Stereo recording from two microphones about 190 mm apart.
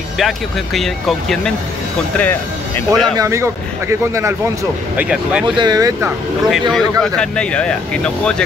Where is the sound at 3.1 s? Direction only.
15° right (ahead or behind).